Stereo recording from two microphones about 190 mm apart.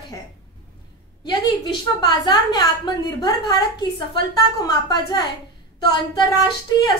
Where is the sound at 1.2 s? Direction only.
20° left (ahead or behind).